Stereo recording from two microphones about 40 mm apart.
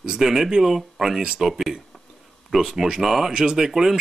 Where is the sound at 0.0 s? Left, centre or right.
Centre.